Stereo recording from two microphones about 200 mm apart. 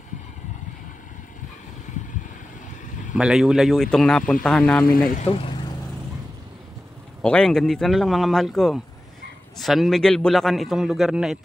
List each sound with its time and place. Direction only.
3.2 s a man's voice: 5° right (ahead or behind)
5.1 s speech: 30° left (ahead or behind)
7.2 s a man's voice: 5° left (ahead or behind)